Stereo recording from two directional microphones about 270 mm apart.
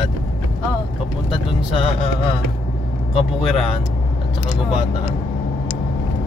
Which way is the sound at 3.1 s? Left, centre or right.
Left.